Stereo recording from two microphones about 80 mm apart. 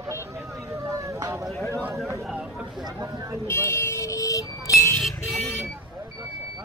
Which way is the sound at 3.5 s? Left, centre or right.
Left.